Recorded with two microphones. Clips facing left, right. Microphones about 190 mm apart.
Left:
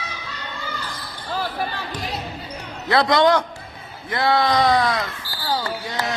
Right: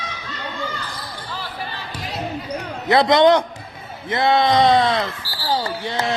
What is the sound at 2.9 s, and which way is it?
A man's voice, 20° right (ahead or behind).